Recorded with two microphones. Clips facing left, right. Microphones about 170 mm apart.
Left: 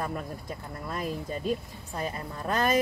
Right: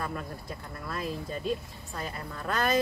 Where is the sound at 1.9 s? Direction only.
20° left (ahead or behind).